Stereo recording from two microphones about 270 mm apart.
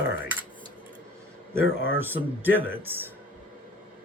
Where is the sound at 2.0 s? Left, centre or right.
Centre.